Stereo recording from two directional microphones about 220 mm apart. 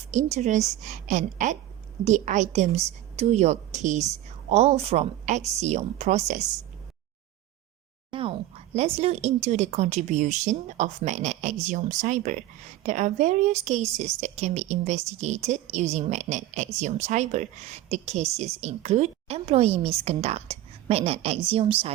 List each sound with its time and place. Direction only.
0.1 s a woman's voice: 35° right (ahead or behind)
8.1 s a woman's voice: 25° right (ahead or behind)